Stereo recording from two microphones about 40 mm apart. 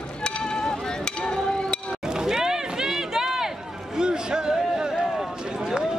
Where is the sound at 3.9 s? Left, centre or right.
Centre.